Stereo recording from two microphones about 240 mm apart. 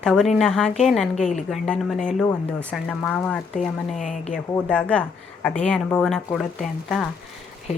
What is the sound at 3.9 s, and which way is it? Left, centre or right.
Speech, left.